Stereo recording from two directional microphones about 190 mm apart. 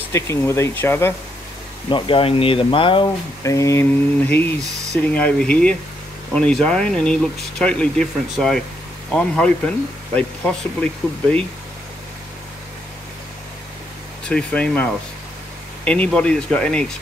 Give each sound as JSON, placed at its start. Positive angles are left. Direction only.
{"t": 0.1, "sound": "speech", "side_deg": 15}
{"t": 1.9, "sound": "speech", "side_deg": 25}
{"t": 14.2, "sound": "speech", "side_deg": 5}